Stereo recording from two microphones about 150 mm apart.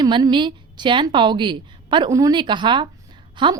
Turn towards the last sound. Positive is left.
turn(degrees=-30)  # may be behind; listen again after turning